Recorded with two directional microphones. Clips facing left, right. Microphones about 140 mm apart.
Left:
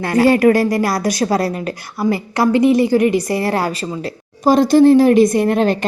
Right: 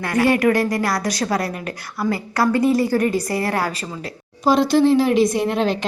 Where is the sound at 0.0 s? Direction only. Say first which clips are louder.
Left 5 dB; 30° left (ahead or behind).